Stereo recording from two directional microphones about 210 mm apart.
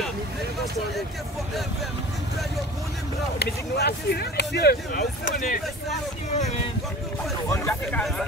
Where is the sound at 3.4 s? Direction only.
50° left (ahead or behind).